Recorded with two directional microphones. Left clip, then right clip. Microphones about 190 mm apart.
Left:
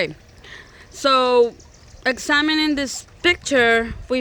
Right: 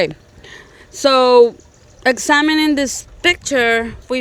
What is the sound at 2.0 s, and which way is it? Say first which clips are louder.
Speech: right 5 dB; 35° right (ahead or behind).